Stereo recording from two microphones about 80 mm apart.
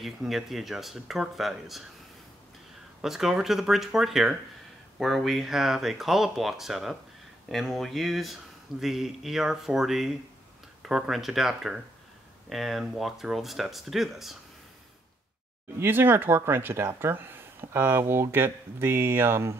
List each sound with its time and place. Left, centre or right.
0.0 s speech: centre
3.0 s speech: centre
15.8 s speech: right